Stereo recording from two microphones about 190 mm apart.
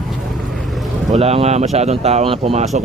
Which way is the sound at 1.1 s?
30° right (ahead or behind).